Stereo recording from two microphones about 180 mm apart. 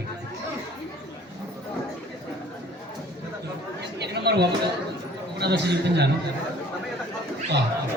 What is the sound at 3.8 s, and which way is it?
Chatter, 65° right (ahead or behind).